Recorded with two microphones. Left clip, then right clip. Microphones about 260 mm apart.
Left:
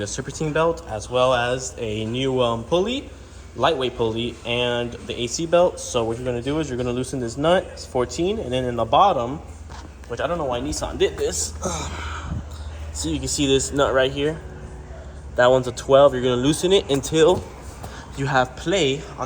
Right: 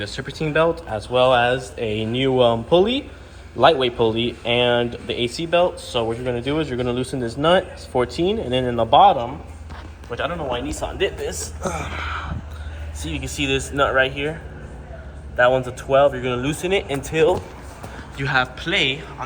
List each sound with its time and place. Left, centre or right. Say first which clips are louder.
0.0 s a man's voice: right 1 dB; centre
10.8 s speech: right 1 dB; left
11.3 s speech: even; centre
15.9 s speech: left 2 dB; centre
18.2 s a man's voice: even; centre